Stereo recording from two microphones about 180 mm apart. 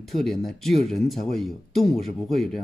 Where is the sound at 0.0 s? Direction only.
Centre (ahead or behind).